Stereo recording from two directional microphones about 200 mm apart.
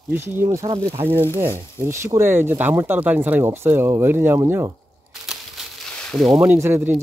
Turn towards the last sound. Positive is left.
turn(degrees=-10)  # may be behind; listen again after turning